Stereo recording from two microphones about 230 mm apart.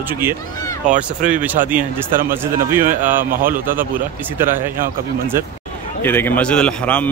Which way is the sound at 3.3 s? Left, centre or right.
Right.